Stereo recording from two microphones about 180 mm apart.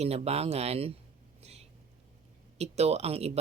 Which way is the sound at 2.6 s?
35° right (ahead or behind).